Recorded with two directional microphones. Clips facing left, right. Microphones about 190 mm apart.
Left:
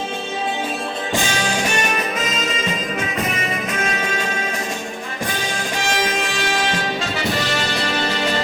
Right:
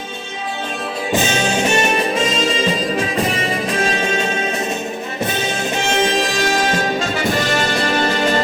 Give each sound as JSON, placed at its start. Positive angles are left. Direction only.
{"t": 1.1, "sound": "music", "side_deg": -20}